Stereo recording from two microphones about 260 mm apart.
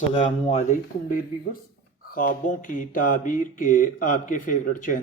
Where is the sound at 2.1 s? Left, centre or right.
Left.